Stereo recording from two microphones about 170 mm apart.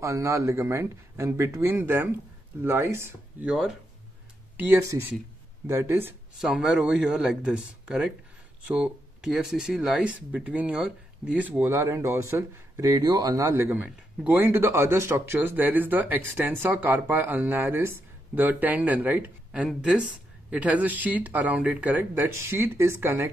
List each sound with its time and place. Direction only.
0.0 s speech: 20° right (ahead or behind)